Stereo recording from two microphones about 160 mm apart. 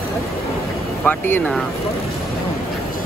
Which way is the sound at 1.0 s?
10° left (ahead or behind).